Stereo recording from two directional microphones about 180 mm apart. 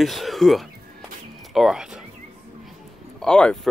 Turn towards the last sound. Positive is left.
turn(degrees=5)  # may be behind; listen again after turning